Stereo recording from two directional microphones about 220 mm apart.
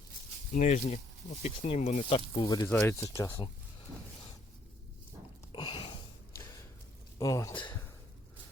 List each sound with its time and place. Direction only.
0.5 s speech: 30° left (ahead or behind)
2.3 s speech: 20° left (ahead or behind)
5.5 s a sound: 20° left (ahead or behind)
7.2 s speech: 15° left (ahead or behind)